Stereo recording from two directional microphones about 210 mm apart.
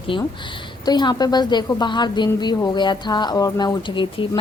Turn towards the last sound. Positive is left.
turn(degrees=25)  # may be behind; listen again after turning